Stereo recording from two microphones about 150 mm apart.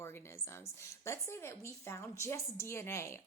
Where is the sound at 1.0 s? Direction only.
20° left (ahead or behind).